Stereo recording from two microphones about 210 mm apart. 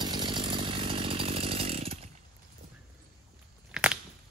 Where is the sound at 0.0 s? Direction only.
20° right (ahead or behind).